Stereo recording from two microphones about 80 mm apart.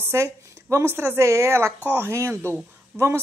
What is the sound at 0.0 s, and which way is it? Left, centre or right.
A woman's voice, right.